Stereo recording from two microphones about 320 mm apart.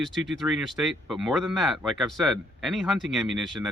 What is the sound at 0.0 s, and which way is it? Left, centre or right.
Speech, centre.